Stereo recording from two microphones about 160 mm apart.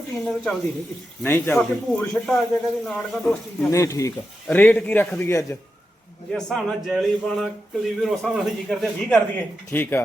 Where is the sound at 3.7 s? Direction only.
20° left (ahead or behind).